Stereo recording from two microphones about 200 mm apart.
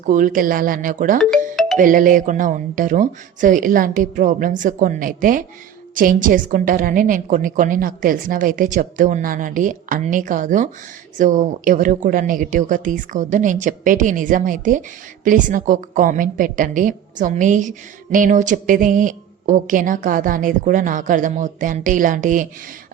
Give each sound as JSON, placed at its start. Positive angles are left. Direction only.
{"t": 0.0, "sound": "speech", "side_deg": -40}
{"t": 1.5, "sound": "music", "side_deg": 0}
{"t": 1.8, "sound": "a woman's voice", "side_deg": -45}